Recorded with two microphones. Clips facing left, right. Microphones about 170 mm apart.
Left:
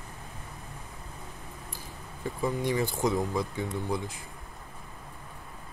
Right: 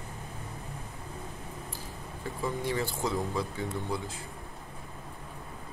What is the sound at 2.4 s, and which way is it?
Speech, 15° left (ahead or behind).